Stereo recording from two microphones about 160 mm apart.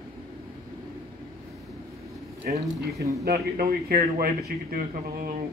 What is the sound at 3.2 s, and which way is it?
A man's voice, 65° right (ahead or behind).